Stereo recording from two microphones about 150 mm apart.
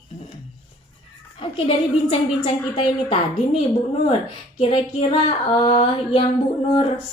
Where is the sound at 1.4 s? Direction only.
40° left (ahead or behind).